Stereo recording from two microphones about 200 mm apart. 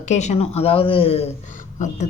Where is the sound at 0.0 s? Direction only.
35° left (ahead or behind).